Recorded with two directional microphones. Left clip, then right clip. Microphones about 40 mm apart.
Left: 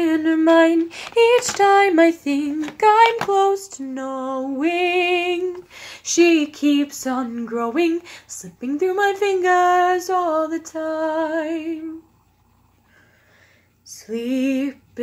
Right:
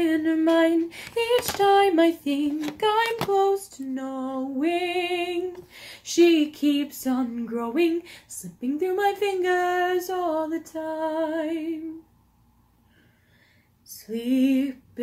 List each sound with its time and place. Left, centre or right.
0.0 s a sound: left
0.7 s female singing: left
3.9 s music: left
5.8 s female singing: left
13.8 s female singing: left